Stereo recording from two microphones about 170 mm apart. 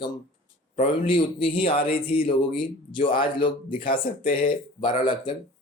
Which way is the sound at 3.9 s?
55° left (ahead or behind).